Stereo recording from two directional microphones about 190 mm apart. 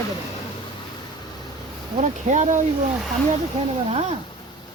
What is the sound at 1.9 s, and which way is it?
Speech, 40° right (ahead or behind).